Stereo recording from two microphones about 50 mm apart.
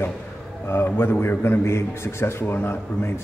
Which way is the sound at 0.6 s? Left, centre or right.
Left.